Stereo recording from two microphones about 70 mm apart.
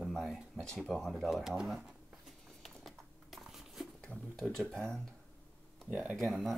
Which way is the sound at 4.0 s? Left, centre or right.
Centre.